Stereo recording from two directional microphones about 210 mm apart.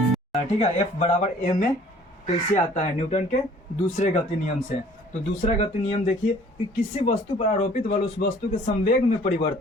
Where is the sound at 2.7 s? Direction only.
30° left (ahead or behind).